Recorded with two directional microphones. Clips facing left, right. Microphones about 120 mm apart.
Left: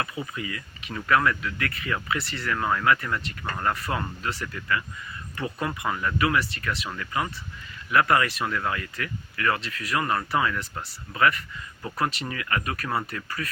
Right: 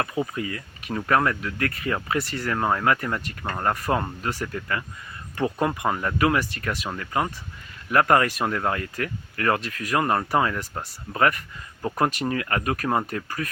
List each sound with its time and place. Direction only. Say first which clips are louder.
0.0 s speech: right 5 dB; 45° right (ahead or behind)